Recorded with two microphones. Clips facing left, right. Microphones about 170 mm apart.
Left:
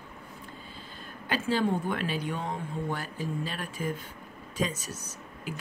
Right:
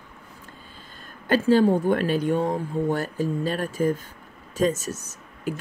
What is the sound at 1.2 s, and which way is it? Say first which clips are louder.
Speech: right 10 dB; 45° right (ahead or behind).